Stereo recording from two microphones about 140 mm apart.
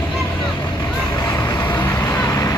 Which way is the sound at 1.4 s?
25° left (ahead or behind).